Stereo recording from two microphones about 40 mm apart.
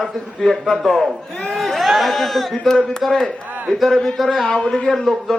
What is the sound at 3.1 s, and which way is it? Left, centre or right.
Speech, centre.